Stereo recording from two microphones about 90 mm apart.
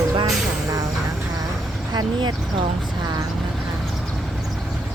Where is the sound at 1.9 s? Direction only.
55° right (ahead or behind).